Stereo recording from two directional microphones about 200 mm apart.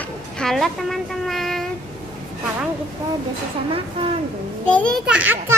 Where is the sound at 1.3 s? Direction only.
Centre (ahead or behind).